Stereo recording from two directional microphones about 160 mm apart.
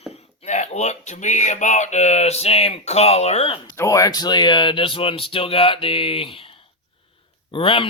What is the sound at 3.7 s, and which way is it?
Speech, 20° left (ahead or behind).